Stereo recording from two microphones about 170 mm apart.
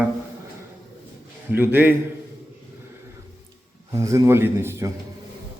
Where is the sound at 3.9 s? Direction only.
20° right (ahead or behind).